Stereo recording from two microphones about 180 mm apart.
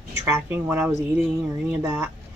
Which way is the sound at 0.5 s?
10° right (ahead or behind).